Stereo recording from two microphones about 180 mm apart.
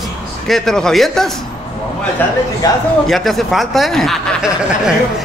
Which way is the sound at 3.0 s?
Centre (ahead or behind).